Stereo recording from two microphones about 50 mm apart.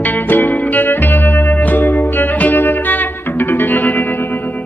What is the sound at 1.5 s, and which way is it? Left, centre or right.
Music, left.